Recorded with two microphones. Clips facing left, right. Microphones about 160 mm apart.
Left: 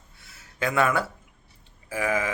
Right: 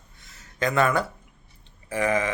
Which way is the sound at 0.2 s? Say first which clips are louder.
Right 2 dB; 10° left (ahead or behind).